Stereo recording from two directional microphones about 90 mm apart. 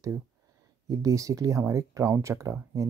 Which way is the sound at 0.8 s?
40° right (ahead or behind).